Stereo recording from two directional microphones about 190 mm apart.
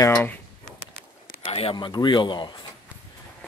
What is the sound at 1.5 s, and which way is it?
Speech, 30° left (ahead or behind).